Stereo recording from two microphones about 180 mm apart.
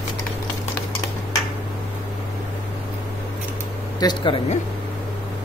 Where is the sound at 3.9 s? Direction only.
25° left (ahead or behind).